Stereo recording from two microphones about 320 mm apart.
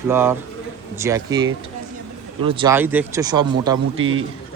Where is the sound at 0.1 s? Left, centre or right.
Centre.